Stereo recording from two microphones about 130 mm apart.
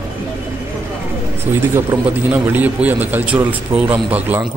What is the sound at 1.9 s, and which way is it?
A man's voice, 10° right (ahead or behind).